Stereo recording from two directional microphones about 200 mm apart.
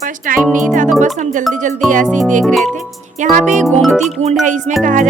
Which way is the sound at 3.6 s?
Centre (ahead or behind).